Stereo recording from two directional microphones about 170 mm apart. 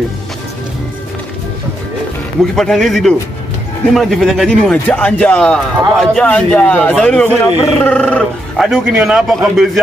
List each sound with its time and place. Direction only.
2.5 s speech: 5° left (ahead or behind)